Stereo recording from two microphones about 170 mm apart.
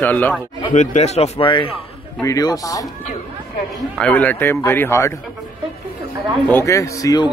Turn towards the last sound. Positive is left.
turn(degrees=20)  # may be behind; listen again after turning